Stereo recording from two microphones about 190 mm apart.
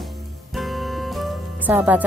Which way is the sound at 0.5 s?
Centre (ahead or behind).